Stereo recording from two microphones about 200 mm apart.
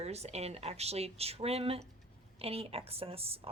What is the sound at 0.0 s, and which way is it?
A woman's voice, 30° right (ahead or behind).